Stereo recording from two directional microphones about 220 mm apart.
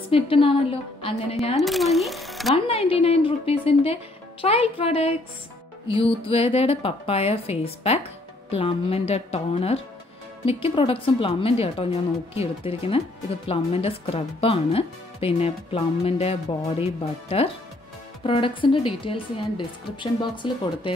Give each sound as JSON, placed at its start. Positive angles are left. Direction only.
{"t": 0.1, "sound": "speech", "side_deg": 25}
{"t": 1.6, "sound": "speech", "side_deg": 0}
{"t": 2.5, "sound": "speech", "side_deg": 25}